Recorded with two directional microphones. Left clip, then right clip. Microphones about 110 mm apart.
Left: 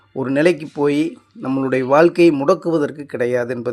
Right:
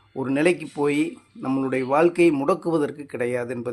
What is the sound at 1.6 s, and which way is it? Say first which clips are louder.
Speech: left 7 dB; 45° left (ahead or behind).